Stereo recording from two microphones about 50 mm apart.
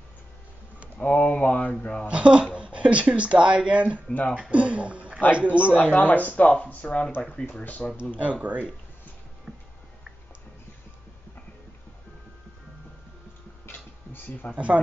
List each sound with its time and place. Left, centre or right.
0.9 s speech: left
2.0 s speech: right
4.1 s speech: left
4.4 s speech: right
6.0 s speech: left
8.2 s speech: right
9.5 s a sound: centre
13.7 s a sound: left
14.5 s speech: right